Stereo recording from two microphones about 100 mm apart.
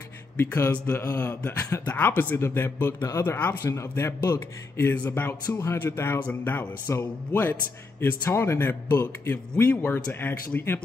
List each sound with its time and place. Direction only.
0.4 s speech: 20° left (ahead or behind)
5.6 s speech: 30° left (ahead or behind)